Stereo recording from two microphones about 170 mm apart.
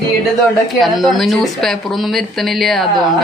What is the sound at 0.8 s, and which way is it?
Speech, centre (ahead or behind).